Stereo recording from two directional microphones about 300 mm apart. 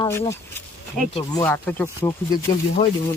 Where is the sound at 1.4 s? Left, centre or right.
Centre.